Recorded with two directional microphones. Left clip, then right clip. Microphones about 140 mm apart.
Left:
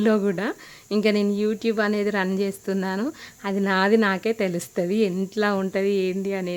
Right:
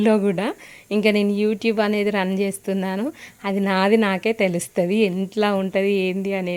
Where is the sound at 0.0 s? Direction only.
5° right (ahead or behind).